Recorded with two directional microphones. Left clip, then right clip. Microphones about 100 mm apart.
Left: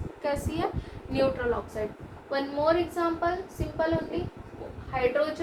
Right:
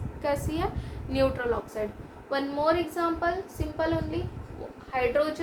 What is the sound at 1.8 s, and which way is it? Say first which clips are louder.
Speech: right 1 dB; 60° right (ahead or behind).